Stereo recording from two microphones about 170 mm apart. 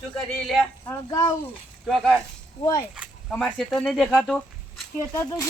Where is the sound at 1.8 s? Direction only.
Centre (ahead or behind).